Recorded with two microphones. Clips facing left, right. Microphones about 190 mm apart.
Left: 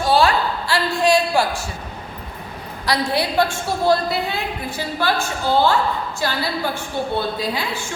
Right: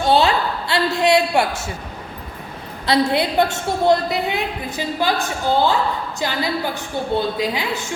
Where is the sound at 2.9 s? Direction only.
20° right (ahead or behind).